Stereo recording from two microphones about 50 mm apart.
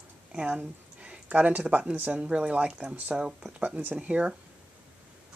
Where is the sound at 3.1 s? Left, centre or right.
Right.